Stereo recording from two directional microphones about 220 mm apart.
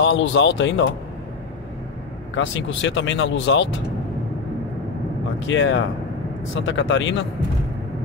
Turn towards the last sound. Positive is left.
turn(degrees=55)  # may be behind; listen again after turning